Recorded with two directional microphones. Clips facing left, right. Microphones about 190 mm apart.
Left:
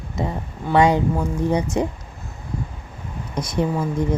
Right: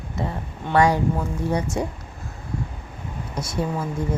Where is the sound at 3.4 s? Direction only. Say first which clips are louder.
Left 4 dB; 20° left (ahead or behind).